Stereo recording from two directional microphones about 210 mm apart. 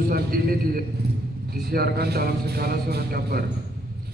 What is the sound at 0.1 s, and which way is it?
A man's voice, 45° right (ahead or behind).